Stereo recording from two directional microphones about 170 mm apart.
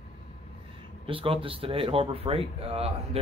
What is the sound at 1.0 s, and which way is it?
Speech, 30° right (ahead or behind).